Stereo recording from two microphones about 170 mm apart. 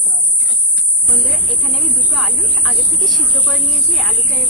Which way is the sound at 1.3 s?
Centre (ahead or behind).